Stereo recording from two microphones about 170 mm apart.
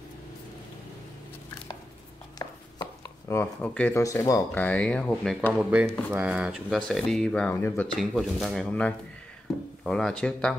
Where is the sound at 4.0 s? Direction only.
20° left (ahead or behind).